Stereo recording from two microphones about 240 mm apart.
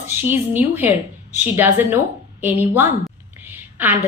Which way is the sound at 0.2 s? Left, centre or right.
Centre.